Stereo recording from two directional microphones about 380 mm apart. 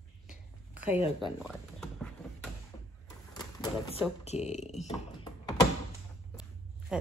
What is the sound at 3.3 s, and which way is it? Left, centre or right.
Typewriter, centre.